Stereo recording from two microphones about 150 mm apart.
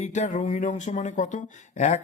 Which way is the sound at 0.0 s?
55° left (ahead or behind).